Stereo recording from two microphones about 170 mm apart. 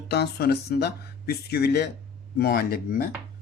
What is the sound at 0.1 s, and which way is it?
Speech, 70° left (ahead or behind).